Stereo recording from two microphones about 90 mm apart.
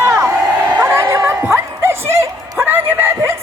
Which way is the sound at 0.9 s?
25° right (ahead or behind).